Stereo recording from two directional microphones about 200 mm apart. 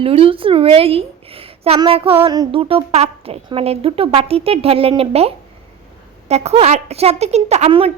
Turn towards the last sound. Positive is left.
turn(degrees=-30)  # may be behind; listen again after turning